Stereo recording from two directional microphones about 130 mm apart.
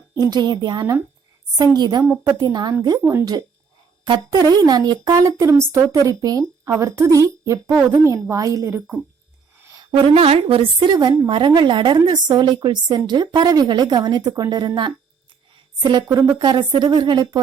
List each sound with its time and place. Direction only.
0.1 s a woman's voice: 30° right (ahead or behind)
3.0 s speech: 20° right (ahead or behind)
4.0 s a woman's voice: 30° right (ahead or behind)
9.9 s a woman's voice: 50° right (ahead or behind); by 14.7 s 30° right (ahead or behind)
15.8 s a woman's voice: 35° right (ahead or behind)